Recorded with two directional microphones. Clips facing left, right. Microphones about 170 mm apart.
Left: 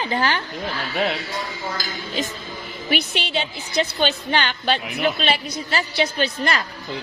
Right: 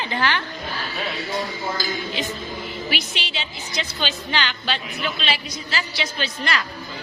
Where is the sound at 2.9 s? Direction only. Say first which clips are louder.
Left 6 dB; 55° left (ahead or behind).